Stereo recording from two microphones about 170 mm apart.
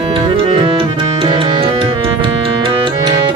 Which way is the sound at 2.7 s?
30° right (ahead or behind).